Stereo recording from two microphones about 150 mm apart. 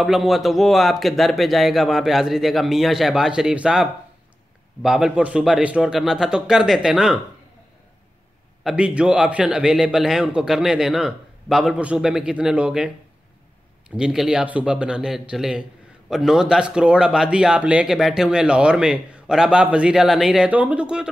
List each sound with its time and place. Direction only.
0.0 s speech: centre (ahead or behind)
8.6 s speech: 5° right (ahead or behind)